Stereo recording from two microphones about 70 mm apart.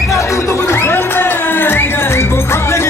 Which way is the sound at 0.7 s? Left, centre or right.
Left.